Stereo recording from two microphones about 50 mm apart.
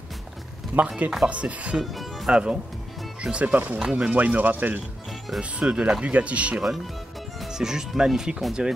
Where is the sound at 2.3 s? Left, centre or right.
Centre.